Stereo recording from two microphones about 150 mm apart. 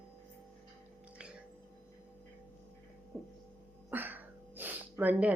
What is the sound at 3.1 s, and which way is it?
Hum, 10° left (ahead or behind).